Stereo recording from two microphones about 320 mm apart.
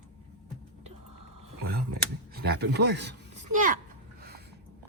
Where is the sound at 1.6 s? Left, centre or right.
Right.